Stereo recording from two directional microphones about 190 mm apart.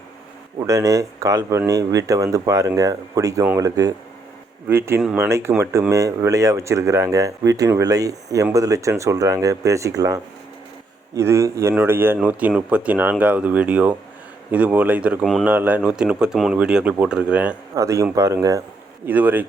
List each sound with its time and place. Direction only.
0.6 s speech: 15° right (ahead or behind)